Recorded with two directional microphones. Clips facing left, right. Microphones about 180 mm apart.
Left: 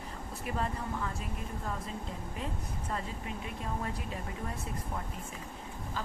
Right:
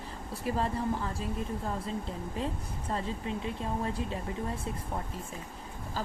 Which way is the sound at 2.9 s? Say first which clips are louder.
Right 5 dB; 30° right (ahead or behind).